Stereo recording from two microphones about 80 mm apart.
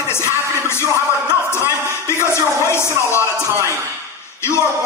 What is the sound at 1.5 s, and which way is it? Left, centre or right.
Speech, left.